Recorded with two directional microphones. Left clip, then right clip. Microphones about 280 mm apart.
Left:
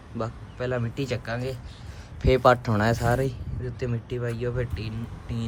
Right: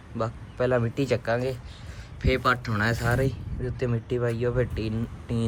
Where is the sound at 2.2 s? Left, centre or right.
Centre.